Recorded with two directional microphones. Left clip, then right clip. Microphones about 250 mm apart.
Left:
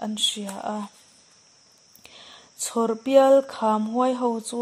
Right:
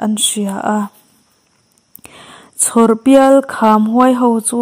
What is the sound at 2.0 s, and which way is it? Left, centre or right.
Speech, right.